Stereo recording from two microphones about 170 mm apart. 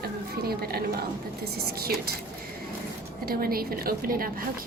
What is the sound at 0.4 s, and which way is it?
A woman's voice, 65° right (ahead or behind).